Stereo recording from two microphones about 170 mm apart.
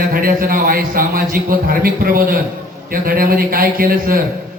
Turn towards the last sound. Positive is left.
turn(degrees=-60)  # may be behind; listen again after turning